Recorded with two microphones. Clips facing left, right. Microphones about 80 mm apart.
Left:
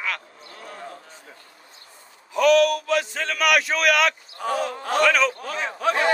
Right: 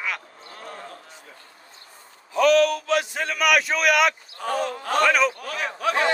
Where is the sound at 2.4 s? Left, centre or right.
Right.